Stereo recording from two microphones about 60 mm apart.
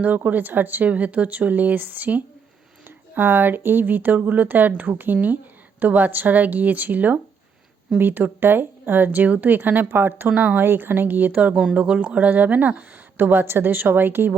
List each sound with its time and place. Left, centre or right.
0.2 s speech: right
11.5 s speech: centre; by 14.3 s right